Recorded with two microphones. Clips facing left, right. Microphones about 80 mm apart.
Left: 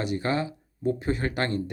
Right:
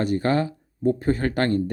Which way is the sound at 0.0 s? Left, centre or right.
Right.